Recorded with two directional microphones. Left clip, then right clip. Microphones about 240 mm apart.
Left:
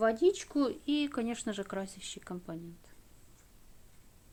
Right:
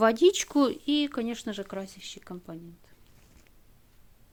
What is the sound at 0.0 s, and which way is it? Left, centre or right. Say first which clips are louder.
Speech: right 6 dB; right.